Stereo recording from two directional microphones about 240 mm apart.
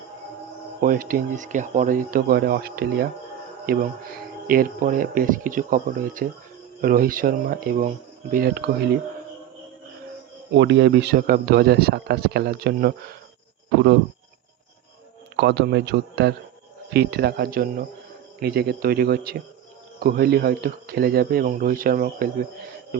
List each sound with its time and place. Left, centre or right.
0.8 s speech: right
10.5 s speech: right
15.4 s a man's voice: right